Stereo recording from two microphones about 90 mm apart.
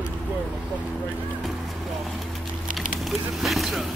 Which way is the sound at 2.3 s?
Centre (ahead or behind).